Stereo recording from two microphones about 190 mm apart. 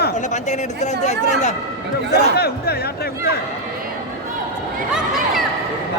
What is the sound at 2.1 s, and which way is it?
Speech, 55° left (ahead or behind).